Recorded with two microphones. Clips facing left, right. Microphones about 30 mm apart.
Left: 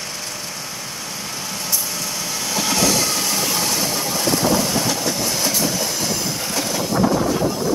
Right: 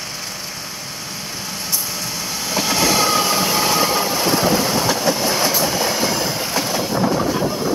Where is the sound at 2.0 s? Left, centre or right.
Centre.